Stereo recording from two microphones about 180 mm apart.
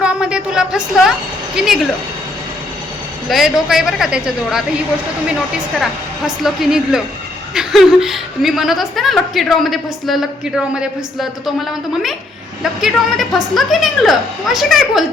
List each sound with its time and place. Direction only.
0.0 s a sound: 5° right (ahead or behind)
1.5 s a woman's voice: centre (ahead or behind)
3.2 s a woman's voice: centre (ahead or behind)
5.8 s a woman's voice: centre (ahead or behind)